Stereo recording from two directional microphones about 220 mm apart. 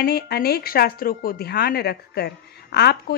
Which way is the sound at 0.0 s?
45° left (ahead or behind).